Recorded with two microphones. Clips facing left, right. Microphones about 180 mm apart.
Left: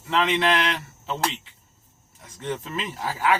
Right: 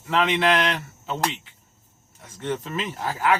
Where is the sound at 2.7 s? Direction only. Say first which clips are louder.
Right 2 dB; centre (ahead or behind).